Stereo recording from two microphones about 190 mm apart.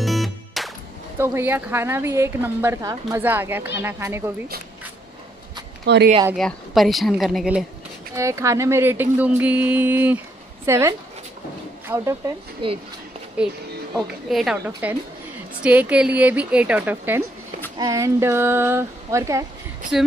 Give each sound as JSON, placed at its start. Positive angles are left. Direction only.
{"t": 0.0, "sound": "music", "side_deg": 0}
{"t": 1.1, "sound": "a woman's voice", "side_deg": -10}
{"t": 5.9, "sound": "speech", "side_deg": -60}
{"t": 6.3, "sound": "speech", "side_deg": 0}
{"t": 8.2, "sound": "a woman's voice", "side_deg": -15}
{"t": 12.6, "sound": "speech", "side_deg": -25}
{"t": 13.4, "sound": "a woman's voice", "side_deg": -5}